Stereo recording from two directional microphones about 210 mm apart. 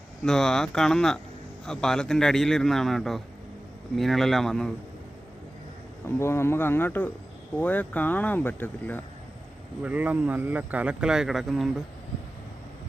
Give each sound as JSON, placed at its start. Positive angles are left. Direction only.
{"t": 0.3, "sound": "a man's voice", "side_deg": 0}
{"t": 6.1, "sound": "speech", "side_deg": 10}
{"t": 9.8, "sound": "a man's voice", "side_deg": -5}